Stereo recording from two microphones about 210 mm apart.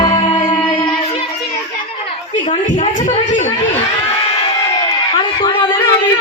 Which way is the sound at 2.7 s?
35° left (ahead or behind).